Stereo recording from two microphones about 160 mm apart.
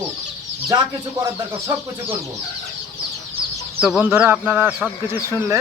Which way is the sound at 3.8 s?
5° right (ahead or behind).